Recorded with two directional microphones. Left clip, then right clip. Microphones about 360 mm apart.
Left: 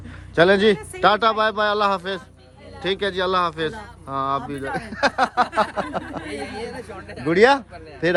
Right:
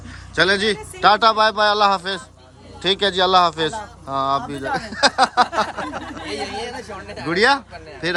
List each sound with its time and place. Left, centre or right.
0.3 s speech: centre
6.2 s speech: right
7.3 s speech: centre